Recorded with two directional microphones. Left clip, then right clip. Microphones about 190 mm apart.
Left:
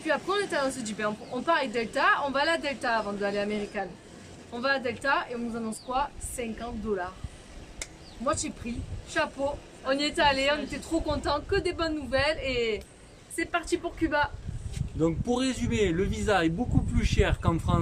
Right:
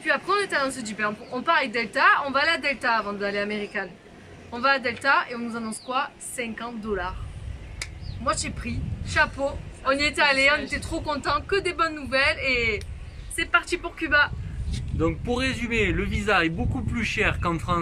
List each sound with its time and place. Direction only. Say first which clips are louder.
0.0 s speech: right 4 dB; 5° left (ahead or behind)
7.8 s a sound: right 3 dB; 5° left (ahead or behind)
9.2 s a woman's voice: right 5 dB; 5° left (ahead or behind)
14.9 s speech: right 2 dB; 20° left (ahead or behind)